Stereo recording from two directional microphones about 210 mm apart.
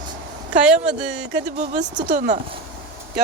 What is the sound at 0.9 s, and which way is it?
Speech, 5° right (ahead or behind).